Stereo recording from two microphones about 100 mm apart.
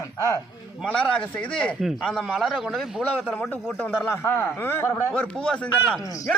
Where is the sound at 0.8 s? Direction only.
15° left (ahead or behind).